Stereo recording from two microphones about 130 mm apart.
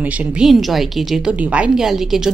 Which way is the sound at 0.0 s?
10° right (ahead or behind).